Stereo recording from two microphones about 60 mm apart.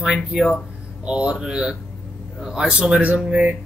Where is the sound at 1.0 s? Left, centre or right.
Centre.